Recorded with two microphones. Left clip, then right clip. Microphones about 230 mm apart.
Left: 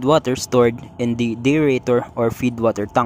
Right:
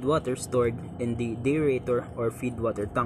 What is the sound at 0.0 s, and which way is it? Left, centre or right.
Speech, left.